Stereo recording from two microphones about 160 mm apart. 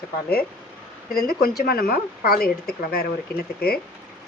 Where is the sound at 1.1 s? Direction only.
70° left (ahead or behind).